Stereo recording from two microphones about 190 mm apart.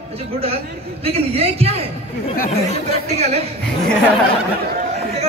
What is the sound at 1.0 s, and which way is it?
Speech, 30° right (ahead or behind).